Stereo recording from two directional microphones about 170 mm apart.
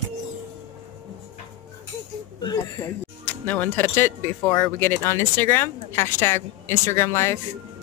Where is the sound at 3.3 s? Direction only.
10° left (ahead or behind).